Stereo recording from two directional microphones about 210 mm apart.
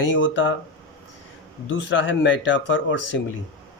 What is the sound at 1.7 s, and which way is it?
Speech, 60° left (ahead or behind).